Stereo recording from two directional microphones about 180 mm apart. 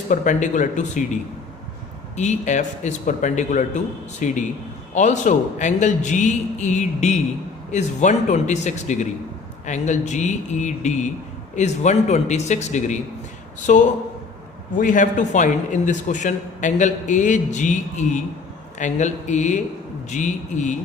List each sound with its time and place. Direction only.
0.1 s a man's voice: 45° left (ahead or behind)